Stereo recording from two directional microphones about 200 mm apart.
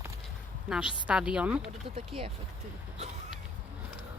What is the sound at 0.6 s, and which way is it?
A woman's voice, 5° right (ahead or behind).